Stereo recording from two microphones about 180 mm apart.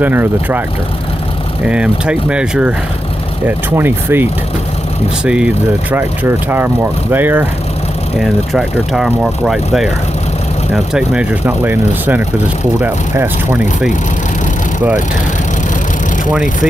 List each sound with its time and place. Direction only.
0.0 s speech: 10° right (ahead or behind)
1.7 s speech: 5° right (ahead or behind)